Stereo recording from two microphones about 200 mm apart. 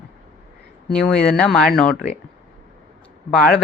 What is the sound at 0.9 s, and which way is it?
Speech, 5° left (ahead or behind).